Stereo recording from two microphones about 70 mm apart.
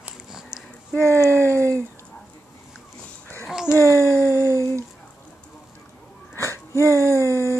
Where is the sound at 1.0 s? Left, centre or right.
Left.